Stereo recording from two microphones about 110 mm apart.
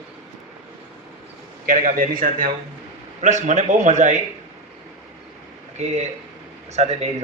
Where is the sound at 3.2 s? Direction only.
90° right.